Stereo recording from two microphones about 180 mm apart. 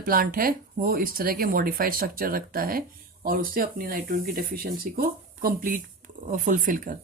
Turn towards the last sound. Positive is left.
turn(degrees=-45)  # may be behind; listen again after turning